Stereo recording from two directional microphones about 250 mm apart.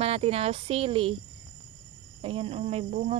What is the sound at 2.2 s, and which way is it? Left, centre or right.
Speech, right.